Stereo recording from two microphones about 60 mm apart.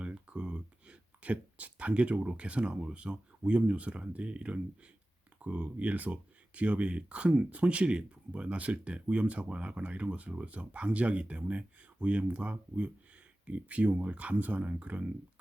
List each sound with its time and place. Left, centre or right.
0.0 s speech: centre